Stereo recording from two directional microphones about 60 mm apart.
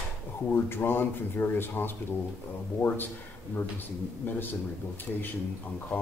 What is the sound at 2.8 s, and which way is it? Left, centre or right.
Speech, left.